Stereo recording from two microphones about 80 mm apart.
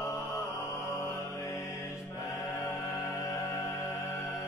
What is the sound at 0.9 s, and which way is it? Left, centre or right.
Mantra, left.